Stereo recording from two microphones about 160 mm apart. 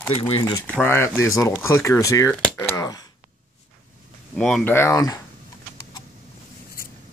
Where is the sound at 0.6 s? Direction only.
10° left (ahead or behind).